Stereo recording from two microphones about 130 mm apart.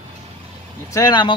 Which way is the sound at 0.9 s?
30° left (ahead or behind).